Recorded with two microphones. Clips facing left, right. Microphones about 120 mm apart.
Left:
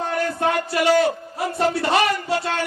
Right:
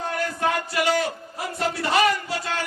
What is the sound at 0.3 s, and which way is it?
Speech, 30° left (ahead or behind).